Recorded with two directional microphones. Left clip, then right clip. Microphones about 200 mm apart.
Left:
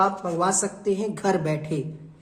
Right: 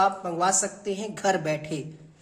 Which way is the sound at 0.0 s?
5° right (ahead or behind).